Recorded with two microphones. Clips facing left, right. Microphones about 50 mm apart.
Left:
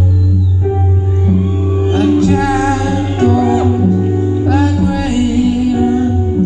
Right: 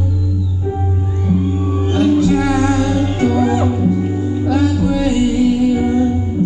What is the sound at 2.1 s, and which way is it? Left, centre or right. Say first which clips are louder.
Music: left 2 dB; left.